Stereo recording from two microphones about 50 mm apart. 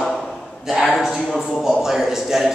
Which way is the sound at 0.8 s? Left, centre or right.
Centre.